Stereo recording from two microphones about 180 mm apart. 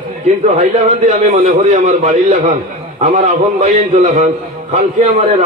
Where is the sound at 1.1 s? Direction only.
40° right (ahead or behind).